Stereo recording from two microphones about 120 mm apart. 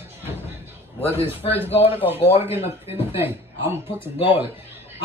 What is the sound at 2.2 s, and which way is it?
Speech, 55° left (ahead or behind).